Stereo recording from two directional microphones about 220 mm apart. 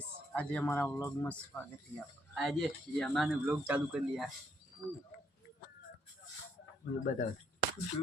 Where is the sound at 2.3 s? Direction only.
Centre (ahead or behind).